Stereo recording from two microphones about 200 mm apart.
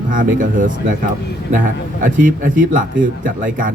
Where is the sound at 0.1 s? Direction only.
40° right (ahead or behind).